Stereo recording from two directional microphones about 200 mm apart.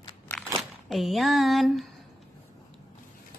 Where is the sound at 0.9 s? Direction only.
Centre (ahead or behind).